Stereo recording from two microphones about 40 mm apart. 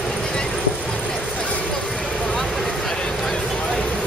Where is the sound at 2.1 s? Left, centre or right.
Left.